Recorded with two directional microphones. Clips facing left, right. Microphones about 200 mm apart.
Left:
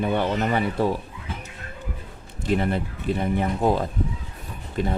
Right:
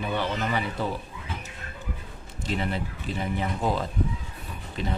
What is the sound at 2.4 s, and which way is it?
Speech, 50° left (ahead or behind).